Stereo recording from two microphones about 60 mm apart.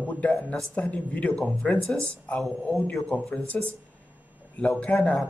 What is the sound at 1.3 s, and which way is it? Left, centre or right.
Speech, centre.